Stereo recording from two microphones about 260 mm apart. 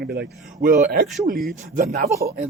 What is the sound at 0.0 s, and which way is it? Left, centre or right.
A man's voice, right.